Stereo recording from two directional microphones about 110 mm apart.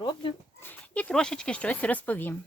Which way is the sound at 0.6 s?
15° left (ahead or behind).